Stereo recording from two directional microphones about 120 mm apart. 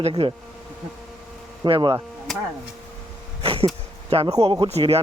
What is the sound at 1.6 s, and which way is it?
Speech, 40° right (ahead or behind).